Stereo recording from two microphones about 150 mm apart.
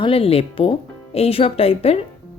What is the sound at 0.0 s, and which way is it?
Speech, 40° left (ahead or behind).